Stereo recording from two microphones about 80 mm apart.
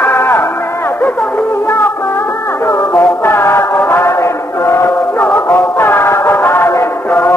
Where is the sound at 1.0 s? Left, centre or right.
Centre.